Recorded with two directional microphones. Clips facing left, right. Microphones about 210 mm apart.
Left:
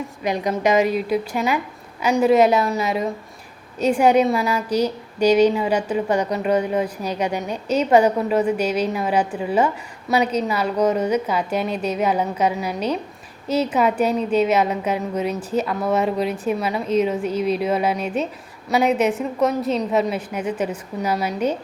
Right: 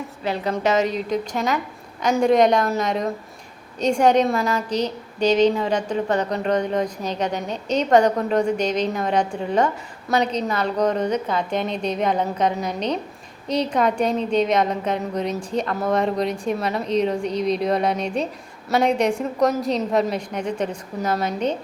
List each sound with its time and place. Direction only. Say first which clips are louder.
0.2 s a woman's voice: left 2 dB; 15° left (ahead or behind)